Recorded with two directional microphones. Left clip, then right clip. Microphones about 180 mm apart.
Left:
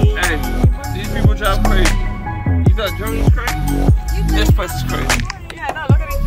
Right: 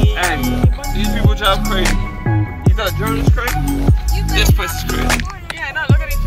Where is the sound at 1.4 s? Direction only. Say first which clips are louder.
Right 2 dB; 35° right (ahead or behind).